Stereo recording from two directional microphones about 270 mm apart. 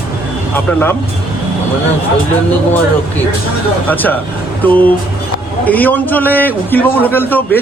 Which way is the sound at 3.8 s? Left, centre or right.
Centre.